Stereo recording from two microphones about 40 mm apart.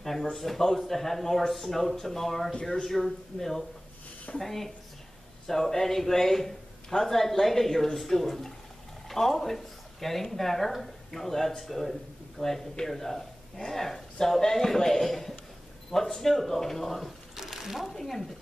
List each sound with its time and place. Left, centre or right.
0.0 s a man's voice: centre
17.4 s a sound: centre
17.8 s a man's voice: centre